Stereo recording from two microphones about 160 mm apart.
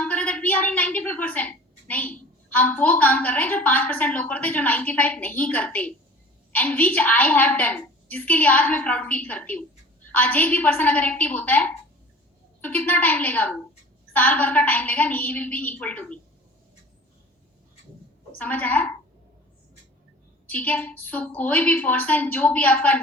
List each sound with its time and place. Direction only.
0.0 s a woman's voice: 10° left (ahead or behind)
18.3 s a woman's voice: 10° left (ahead or behind)
20.5 s a woman's voice: 10° left (ahead or behind)